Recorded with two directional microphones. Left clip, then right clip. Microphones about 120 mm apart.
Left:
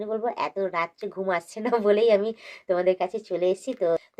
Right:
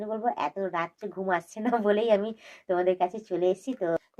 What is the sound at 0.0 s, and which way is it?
A woman's voice, 35° left (ahead or behind).